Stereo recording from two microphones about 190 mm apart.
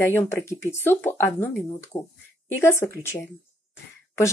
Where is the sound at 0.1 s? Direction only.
10° left (ahead or behind).